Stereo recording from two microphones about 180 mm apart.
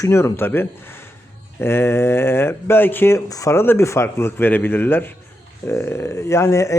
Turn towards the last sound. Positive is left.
turn(degrees=15)  # may be behind; listen again after turning